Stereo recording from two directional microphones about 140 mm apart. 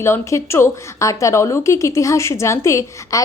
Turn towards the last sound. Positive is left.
turn(degrees=20)  # may be behind; listen again after turning